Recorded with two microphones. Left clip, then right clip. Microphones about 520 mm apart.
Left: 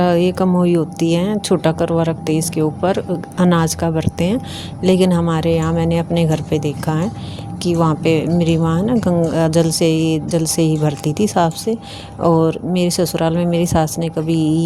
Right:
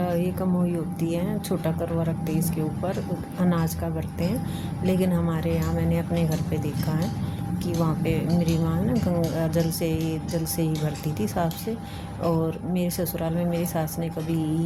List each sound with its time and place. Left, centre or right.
0.0 s speech: centre